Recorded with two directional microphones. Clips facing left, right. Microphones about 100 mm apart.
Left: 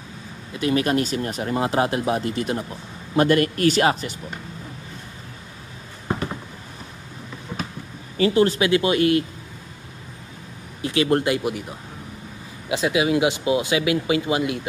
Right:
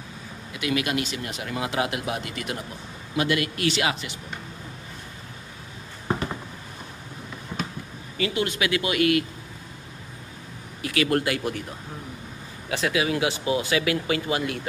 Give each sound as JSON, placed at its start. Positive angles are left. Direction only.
{"t": 0.5, "sound": "speech", "side_deg": 35}
{"t": 8.2, "sound": "speech", "side_deg": 35}
{"t": 10.8, "sound": "speech", "side_deg": 25}
{"t": 12.6, "sound": "speech", "side_deg": 20}